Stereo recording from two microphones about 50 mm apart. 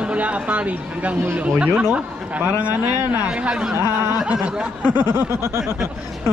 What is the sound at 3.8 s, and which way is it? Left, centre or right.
Snicker, right.